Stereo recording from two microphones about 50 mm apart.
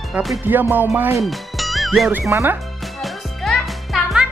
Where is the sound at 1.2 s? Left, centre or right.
Centre.